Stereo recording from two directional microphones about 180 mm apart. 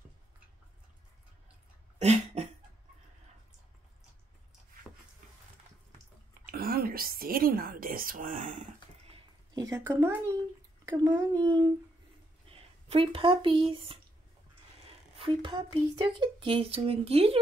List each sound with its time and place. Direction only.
2.0 s a sound: 35° right (ahead or behind)
6.4 s a woman's voice: 55° right (ahead or behind)
9.6 s a child's voice: 15° right (ahead or behind)
12.4 s speech: 30° right (ahead or behind)
15.1 s speech: 30° right (ahead or behind)